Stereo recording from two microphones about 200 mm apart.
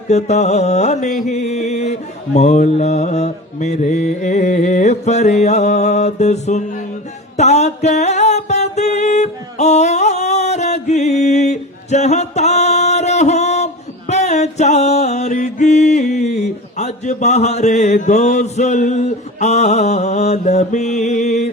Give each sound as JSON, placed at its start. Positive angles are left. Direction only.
{"t": 0.1, "sound": "music", "side_deg": 35}
{"t": 1.2, "sound": "mantra", "side_deg": 35}
{"t": 7.3, "sound": "music", "side_deg": 35}